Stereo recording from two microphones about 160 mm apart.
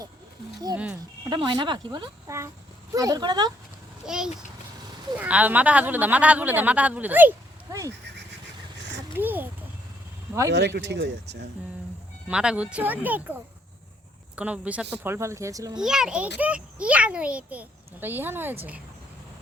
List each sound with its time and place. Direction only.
1.2 s speech: 30° right (ahead or behind)
4.0 s a child's voice: 5° right (ahead or behind); by 7.9 s 20° right (ahead or behind)
9.1 s a child's voice: 10° right (ahead or behind)
10.5 s speech: 90° right
12.3 s speech: 5° right (ahead or behind)
15.8 s a child's voice: 5° right (ahead or behind)